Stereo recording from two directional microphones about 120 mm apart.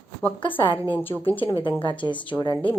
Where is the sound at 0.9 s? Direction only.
15° left (ahead or behind).